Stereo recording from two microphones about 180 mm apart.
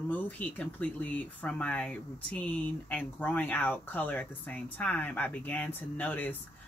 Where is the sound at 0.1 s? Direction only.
10° left (ahead or behind).